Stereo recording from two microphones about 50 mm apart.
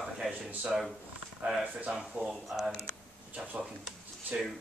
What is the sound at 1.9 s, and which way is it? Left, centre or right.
Speech, centre.